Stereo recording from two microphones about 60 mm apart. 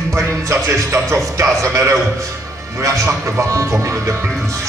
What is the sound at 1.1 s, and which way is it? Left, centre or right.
A man's voice, right.